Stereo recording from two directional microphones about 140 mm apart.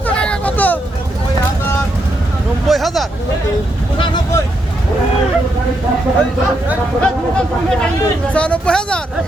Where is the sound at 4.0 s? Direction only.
35° left (ahead or behind).